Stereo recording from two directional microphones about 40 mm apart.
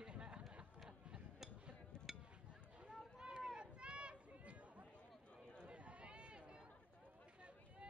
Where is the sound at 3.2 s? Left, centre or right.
Right.